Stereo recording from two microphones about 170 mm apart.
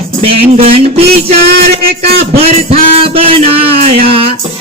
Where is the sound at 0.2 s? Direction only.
35° right (ahead or behind).